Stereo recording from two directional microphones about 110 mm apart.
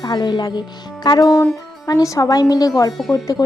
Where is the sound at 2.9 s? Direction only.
Centre (ahead or behind).